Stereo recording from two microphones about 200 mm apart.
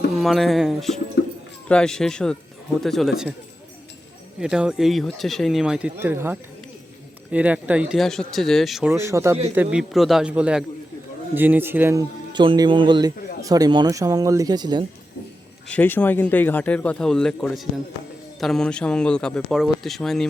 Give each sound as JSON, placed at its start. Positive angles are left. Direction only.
{"t": 0.2, "sound": "speech", "side_deg": 0}
{"t": 1.2, "sound": "bird", "side_deg": 60}
{"t": 1.6, "sound": "speech", "side_deg": 5}
{"t": 4.4, "sound": "speech", "side_deg": -5}
{"t": 15.6, "sound": "speech", "side_deg": 5}